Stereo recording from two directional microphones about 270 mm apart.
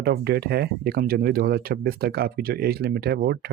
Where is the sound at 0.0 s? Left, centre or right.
Right.